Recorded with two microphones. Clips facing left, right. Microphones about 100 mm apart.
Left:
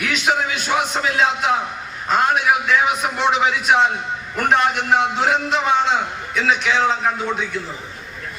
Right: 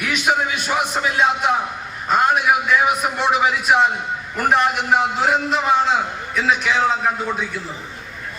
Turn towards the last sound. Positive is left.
turn(degrees=-5)  # may be behind; listen again after turning